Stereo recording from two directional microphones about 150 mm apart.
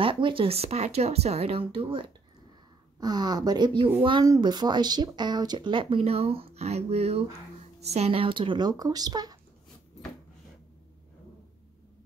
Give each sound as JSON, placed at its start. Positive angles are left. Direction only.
{"t": 0.0, "sound": "speech", "side_deg": -35}
{"t": 3.0, "sound": "speech", "side_deg": -25}